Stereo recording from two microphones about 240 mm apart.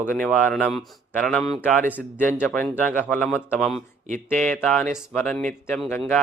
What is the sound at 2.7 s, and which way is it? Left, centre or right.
A man's voice, centre.